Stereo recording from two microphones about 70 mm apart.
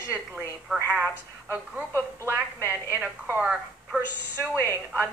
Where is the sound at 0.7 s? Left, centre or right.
Centre.